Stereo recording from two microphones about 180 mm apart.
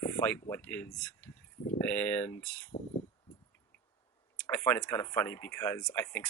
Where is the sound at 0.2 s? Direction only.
10° left (ahead or behind).